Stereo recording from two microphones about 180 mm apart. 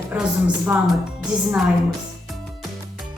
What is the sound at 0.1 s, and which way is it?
Speech, 10° right (ahead or behind).